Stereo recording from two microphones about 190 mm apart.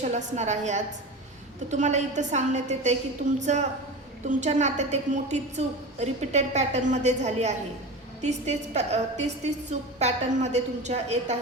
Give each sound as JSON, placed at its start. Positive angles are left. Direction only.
{"t": 0.0, "sound": "a woman's voice", "side_deg": -35}